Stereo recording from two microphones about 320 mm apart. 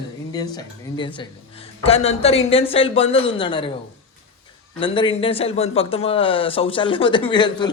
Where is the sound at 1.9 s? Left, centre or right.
Centre.